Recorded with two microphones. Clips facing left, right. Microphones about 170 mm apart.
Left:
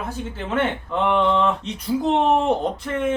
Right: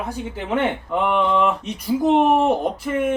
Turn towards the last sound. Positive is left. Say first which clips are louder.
# right 2 dB
turn(degrees=-10)  # may be behind; listen again after turning